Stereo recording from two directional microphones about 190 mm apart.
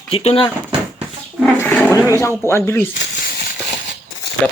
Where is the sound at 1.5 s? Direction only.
10° left (ahead or behind).